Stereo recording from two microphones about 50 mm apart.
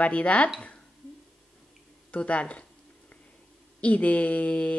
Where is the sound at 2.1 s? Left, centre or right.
Left.